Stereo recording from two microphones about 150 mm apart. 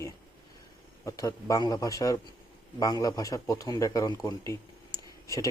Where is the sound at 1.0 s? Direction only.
20° left (ahead or behind).